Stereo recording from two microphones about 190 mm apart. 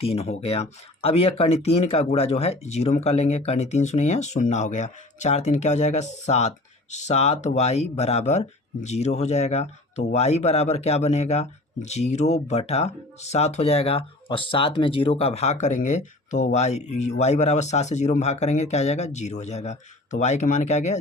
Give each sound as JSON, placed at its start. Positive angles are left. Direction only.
{"t": 0.0, "sound": "speech", "side_deg": 30}